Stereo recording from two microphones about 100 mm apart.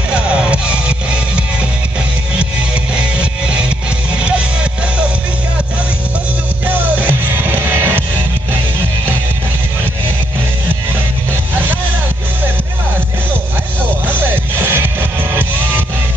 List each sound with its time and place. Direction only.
0.1 s music: 10° right (ahead or behind)
6.7 s music: 20° right (ahead or behind)
14.0 s music: 20° right (ahead or behind)